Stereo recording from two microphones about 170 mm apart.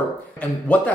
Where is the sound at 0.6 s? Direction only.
10° left (ahead or behind).